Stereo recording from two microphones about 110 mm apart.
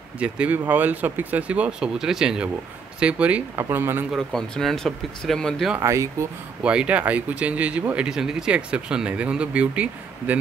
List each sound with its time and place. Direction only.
0.2 s speech: 15° right (ahead or behind)
4.1 s speech: 5° left (ahead or behind)
5.8 s speech: 30° right (ahead or behind)
6.6 s speech: 10° right (ahead or behind)